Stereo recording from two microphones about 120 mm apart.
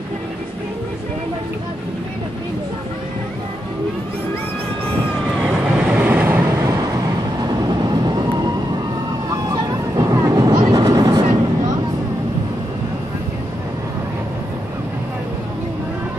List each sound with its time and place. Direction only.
5.5 s vehicle: 10° right (ahead or behind)
7.4 s vehicle: 35° right (ahead or behind)
9.5 s vehicle: 30° right (ahead or behind)